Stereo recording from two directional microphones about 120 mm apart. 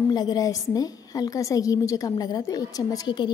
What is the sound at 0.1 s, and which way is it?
A woman's voice, 35° left (ahead or behind).